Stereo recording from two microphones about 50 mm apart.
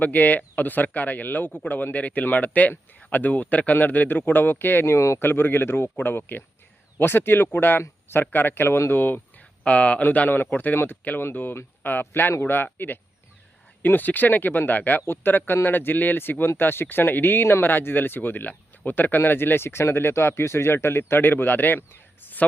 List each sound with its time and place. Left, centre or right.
0.0 s speech: left
4.9 s speech: left
5.2 s speech: left
9.6 s speech: left
10.0 s speech: left
11.2 s speech: left
21.8 s a sound: left